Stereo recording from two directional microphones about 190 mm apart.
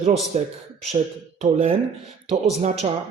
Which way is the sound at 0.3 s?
35° right (ahead or behind).